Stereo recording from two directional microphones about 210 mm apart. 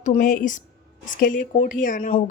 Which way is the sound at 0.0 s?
40° left (ahead or behind).